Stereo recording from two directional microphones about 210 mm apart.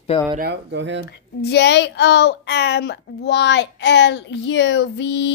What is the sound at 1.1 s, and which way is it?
Speech, 50° left (ahead or behind).